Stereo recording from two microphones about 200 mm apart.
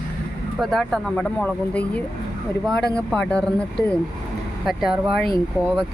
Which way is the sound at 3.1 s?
5° left (ahead or behind).